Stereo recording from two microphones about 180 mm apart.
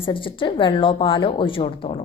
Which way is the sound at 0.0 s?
30° left (ahead or behind).